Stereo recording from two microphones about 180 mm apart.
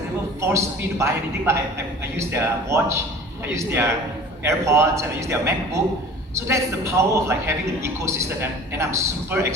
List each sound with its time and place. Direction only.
0.4 s a man's voice: 15° right (ahead or behind)